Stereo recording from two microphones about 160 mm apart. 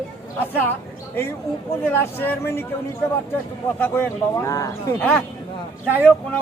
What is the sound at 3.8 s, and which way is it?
Speech, 15° left (ahead or behind).